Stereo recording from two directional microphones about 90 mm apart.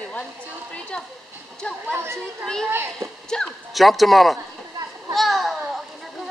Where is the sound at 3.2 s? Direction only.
5° left (ahead or behind).